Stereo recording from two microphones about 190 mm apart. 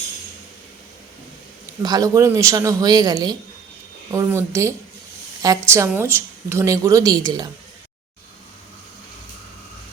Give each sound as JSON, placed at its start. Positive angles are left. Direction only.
{"t": 1.8, "sound": "speech", "side_deg": -20}